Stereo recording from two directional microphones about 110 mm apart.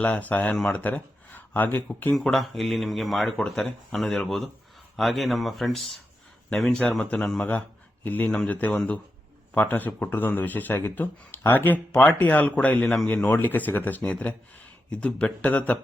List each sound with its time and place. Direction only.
0.0 s speech: 15° left (ahead or behind)
2.1 s speech: centre (ahead or behind)